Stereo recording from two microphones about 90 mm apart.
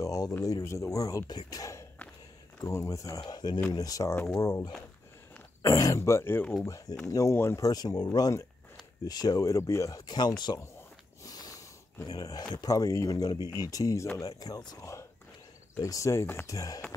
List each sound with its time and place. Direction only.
0.0 s a sound: 40° left (ahead or behind)
0.4 s speech: 35° left (ahead or behind)
3.3 s speech: 50° left (ahead or behind); by 6.4 s 30° left (ahead or behind)
6.6 s speech: 40° left (ahead or behind)
11.2 s a sound: 45° left (ahead or behind)
12.1 s speech: 45° left (ahead or behind)
15.8 s speech: 35° left (ahead or behind)
16.4 s speech: 40° left (ahead or behind)